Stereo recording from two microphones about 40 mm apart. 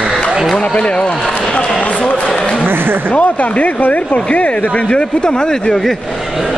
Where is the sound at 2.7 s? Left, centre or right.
Right.